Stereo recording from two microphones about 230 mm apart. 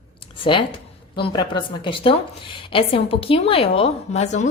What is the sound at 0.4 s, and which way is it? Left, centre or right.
A woman's voice, left.